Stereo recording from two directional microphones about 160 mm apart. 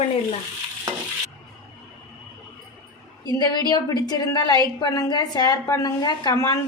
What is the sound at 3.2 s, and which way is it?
A woman's voice, 25° left (ahead or behind).